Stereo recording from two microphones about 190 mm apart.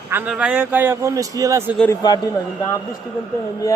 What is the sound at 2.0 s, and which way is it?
Speech, 20° left (ahead or behind).